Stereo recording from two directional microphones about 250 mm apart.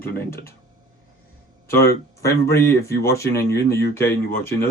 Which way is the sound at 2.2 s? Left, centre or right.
Centre.